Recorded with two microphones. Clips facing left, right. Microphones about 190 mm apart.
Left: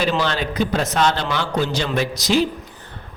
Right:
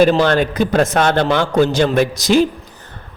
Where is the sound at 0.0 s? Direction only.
50° right (ahead or behind).